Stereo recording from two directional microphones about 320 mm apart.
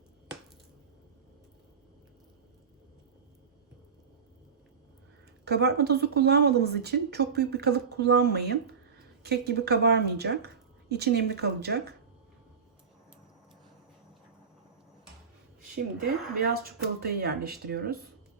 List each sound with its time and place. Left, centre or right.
5.5 s speech: right
16.4 s speech: right